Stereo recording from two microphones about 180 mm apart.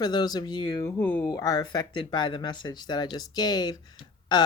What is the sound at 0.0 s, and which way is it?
Speech, 25° left (ahead or behind).